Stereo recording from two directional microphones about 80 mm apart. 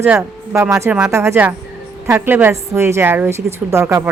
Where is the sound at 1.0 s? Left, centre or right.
Right.